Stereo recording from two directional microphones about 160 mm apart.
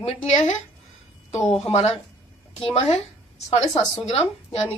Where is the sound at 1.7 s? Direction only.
40° left (ahead or behind).